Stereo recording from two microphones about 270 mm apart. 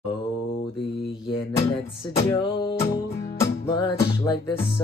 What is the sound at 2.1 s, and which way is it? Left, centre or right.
Music, centre.